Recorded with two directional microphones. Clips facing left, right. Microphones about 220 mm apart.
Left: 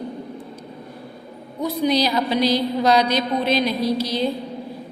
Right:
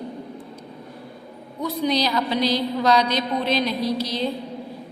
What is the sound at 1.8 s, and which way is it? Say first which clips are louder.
A woman's voice: left 3 dB; 5° left (ahead or behind).